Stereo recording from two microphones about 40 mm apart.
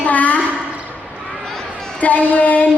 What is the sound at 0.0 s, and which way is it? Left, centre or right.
Speech, left.